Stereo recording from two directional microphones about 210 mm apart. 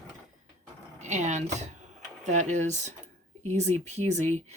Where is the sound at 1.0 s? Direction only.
35° right (ahead or behind).